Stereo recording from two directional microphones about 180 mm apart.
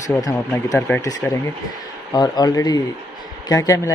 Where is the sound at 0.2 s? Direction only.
20° left (ahead or behind).